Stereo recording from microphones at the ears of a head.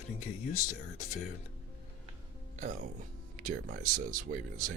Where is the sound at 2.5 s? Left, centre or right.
Right.